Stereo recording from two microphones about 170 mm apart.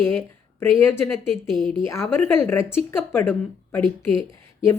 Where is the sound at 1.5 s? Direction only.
Centre (ahead or behind).